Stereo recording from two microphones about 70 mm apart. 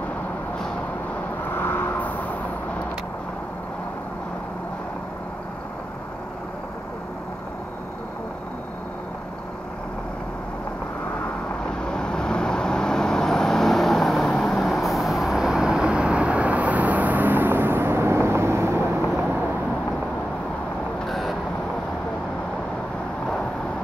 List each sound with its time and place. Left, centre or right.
1.5 s vehicle: left
11.8 s vehicle: centre; by 18.8 s right
21.1 s vehicle: centre